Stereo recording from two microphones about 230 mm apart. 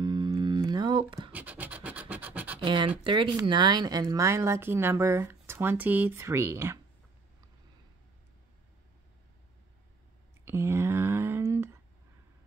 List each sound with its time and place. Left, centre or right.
0.0 s music: centre
1.3 s scratch: centre
2.6 s speech: right
10.4 s a sound: centre